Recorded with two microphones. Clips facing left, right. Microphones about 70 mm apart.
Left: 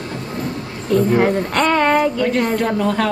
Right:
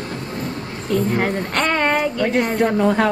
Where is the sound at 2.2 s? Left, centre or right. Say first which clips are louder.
Even; centre.